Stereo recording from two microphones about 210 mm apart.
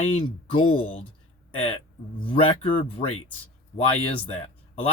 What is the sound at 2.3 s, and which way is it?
Speech, 25° left (ahead or behind).